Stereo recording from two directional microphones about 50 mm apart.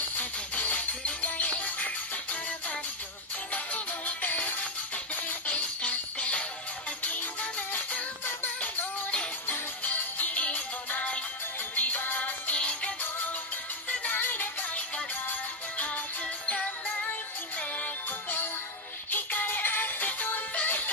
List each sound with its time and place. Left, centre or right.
0.2 s music: left
3.5 s music: left
9.5 s music: left
12.5 s music: left
13.8 s music: left
16.4 s music: left
19.0 s music: left